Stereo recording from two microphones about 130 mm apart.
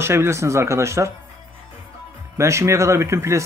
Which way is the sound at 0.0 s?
20° right (ahead or behind).